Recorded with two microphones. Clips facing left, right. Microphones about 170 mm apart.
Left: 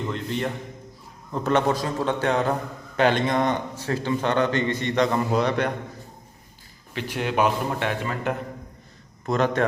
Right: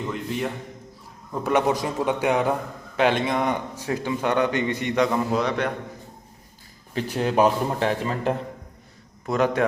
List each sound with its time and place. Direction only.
0.0 s a man's voice: 5° right (ahead or behind)
6.9 s a man's voice: 35° right (ahead or behind)
9.2 s a man's voice: 10° right (ahead or behind)